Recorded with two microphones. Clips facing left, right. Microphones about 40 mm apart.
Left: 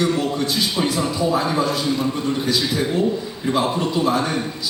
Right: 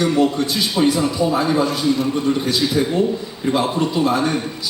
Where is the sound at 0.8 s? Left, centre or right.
Centre.